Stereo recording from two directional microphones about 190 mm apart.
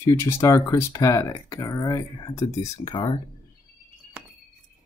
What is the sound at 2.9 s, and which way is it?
Speech, 25° left (ahead or behind).